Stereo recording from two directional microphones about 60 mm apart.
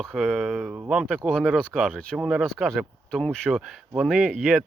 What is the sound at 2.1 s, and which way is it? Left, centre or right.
Speech, centre.